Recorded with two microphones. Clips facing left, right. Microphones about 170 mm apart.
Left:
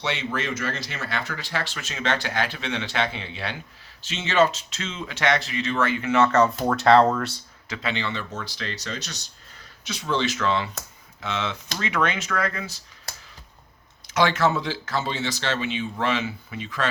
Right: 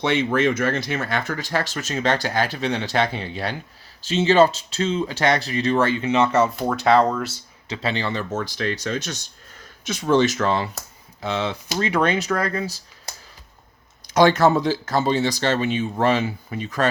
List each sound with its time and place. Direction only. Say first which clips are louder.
0.0 s speech: right 9 dB; 50° right (ahead or behind); by 6.5 s 10° right (ahead or behind)
6.5 s speech: even; centre (ahead or behind)
7.7 s speech: right 4 dB; 35° right (ahead or behind)
14.1 s speech: right 6 dB; 40° right (ahead or behind)